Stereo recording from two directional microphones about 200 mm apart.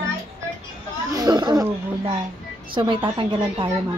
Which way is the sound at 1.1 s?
20° right (ahead or behind).